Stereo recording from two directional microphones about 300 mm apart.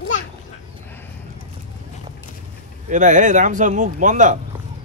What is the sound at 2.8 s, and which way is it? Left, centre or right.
Speech, right.